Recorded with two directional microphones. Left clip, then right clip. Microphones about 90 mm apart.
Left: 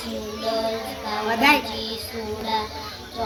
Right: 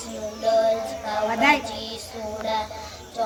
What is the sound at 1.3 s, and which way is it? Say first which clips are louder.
Speech: left 2 dB; 25° left (ahead or behind).